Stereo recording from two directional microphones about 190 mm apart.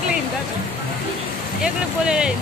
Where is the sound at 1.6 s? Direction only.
5° right (ahead or behind).